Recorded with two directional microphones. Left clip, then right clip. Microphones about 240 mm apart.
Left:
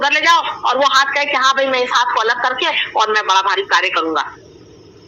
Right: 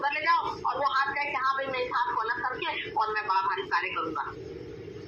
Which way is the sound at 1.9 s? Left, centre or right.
Left.